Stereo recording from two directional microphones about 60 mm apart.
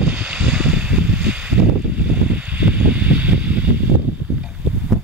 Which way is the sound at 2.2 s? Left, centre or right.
Right.